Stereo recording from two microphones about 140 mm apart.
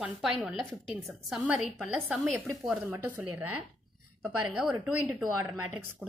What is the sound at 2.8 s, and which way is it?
A woman's voice, 15° right (ahead or behind).